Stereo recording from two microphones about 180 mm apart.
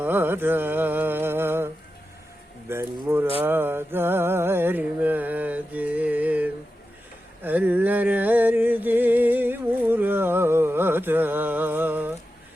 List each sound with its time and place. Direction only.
0.0 s mantra: 10° right (ahead or behind)
3.4 s music: 10° right (ahead or behind)
7.4 s a sound: 10° right (ahead or behind)